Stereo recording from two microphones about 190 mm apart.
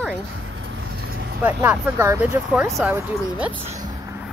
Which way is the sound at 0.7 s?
65° right (ahead or behind).